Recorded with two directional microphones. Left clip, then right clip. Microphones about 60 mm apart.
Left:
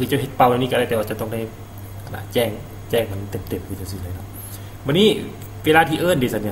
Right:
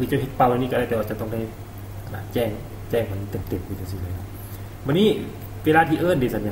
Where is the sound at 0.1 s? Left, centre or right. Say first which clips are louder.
Left 4 dB; centre.